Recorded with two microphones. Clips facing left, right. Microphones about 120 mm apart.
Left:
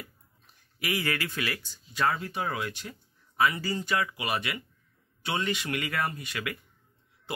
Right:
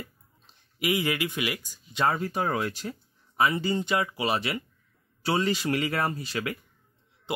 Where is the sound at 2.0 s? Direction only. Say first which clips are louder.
Right 3 dB; 40° right (ahead or behind).